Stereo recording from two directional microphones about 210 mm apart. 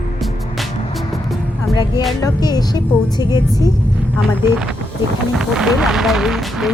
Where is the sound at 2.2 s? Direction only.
15° left (ahead or behind).